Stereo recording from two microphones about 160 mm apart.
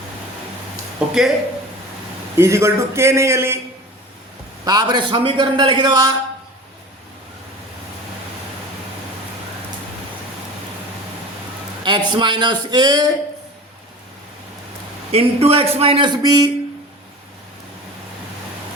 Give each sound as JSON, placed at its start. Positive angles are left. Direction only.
{"t": 0.9, "sound": "speech", "side_deg": -5}
{"t": 2.4, "sound": "a man's voice", "side_deg": -15}
{"t": 4.6, "sound": "a man's voice", "side_deg": -25}
{"t": 11.9, "sound": "a man's voice", "side_deg": -30}
{"t": 15.1, "sound": "a man's voice", "side_deg": -40}